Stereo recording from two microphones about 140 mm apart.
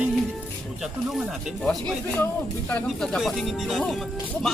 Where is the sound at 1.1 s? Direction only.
Centre (ahead or behind).